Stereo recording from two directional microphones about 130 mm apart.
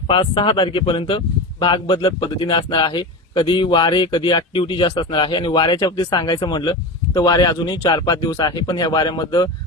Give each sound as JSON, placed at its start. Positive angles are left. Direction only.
{"t": 0.1, "sound": "speech", "side_deg": 45}